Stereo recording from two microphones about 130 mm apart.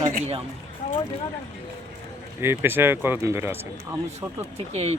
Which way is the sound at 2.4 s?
20° right (ahead or behind).